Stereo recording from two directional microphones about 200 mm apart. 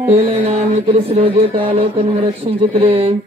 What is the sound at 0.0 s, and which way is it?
Mantra, 30° right (ahead or behind).